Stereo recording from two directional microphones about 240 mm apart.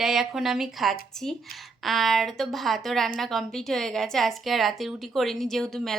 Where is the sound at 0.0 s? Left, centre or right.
Centre.